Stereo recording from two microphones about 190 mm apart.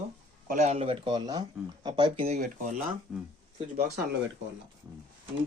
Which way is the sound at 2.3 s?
45° right (ahead or behind).